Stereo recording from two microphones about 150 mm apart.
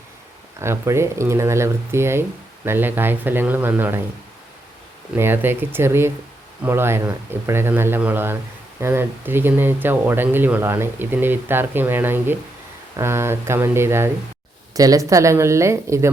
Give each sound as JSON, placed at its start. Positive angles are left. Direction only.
{"t": 0.6, "sound": "speech", "side_deg": -15}
{"t": 5.1, "sound": "speech", "side_deg": -15}